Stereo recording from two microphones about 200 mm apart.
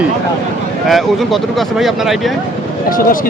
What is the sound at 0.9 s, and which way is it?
Speech, centre (ahead or behind).